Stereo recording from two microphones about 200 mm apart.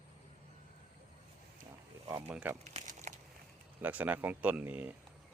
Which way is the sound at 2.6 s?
35° right (ahead or behind).